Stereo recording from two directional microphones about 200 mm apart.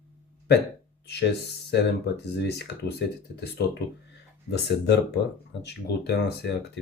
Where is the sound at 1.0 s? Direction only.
55° left (ahead or behind).